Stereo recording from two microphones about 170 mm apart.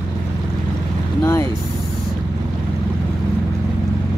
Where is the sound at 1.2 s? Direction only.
15° left (ahead or behind).